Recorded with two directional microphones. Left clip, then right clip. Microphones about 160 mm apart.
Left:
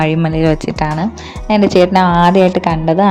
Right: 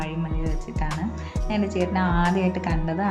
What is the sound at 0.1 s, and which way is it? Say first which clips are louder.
Speech: left 18 dB; 90° left.